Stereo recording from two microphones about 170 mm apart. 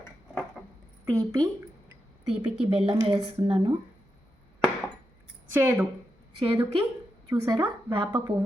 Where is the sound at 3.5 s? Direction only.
35° right (ahead or behind).